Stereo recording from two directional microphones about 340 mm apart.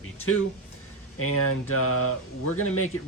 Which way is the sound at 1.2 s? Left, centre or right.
Left.